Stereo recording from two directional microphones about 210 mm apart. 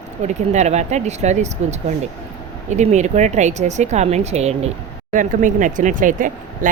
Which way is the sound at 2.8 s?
35° right (ahead or behind).